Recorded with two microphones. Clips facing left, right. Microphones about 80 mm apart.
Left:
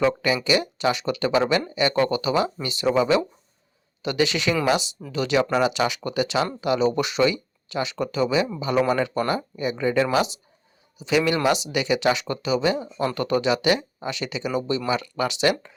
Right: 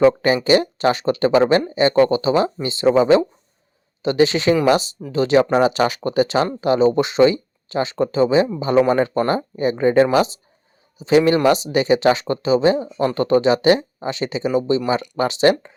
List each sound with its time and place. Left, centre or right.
0.0 s a man's voice: right